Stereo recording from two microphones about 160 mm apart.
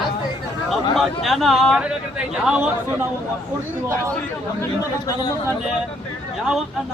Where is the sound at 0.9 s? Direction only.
Centre (ahead or behind).